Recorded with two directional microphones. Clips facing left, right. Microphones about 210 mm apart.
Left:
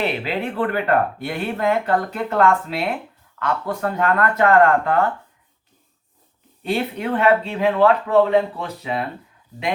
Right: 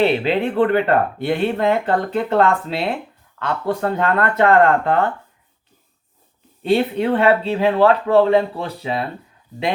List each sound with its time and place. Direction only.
0.0 s speech: 25° right (ahead or behind)
6.6 s speech: 30° right (ahead or behind)